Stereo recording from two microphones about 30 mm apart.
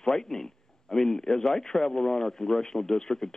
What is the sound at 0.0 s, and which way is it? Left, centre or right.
A man's voice, centre.